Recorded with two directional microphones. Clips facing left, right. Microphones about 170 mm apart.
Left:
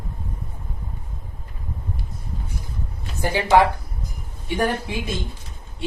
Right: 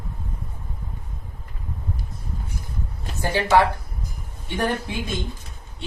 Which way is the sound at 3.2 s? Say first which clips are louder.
Left 1 dB; 15° left (ahead or behind).